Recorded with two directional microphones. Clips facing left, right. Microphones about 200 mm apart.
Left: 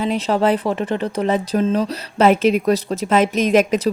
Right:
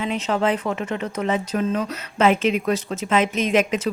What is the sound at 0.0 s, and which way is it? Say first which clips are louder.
Speech: left 4 dB; 35° left (ahead or behind).